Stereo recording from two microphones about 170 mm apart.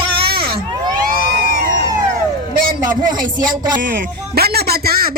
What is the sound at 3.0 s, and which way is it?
Speech, 25° right (ahead or behind).